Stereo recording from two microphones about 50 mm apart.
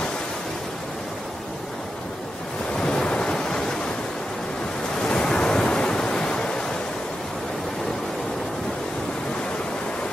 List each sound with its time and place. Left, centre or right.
2.8 s waves: centre
5.1 s waves: centre